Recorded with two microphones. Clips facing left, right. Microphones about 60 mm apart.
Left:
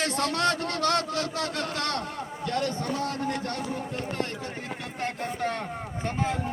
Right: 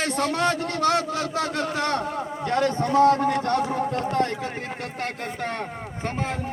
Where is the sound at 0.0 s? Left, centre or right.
Centre.